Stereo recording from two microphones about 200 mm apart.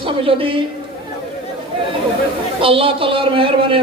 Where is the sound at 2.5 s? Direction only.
25° right (ahead or behind).